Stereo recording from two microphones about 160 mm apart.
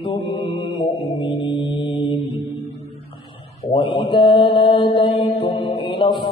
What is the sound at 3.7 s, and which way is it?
Mantra, 30° left (ahead or behind).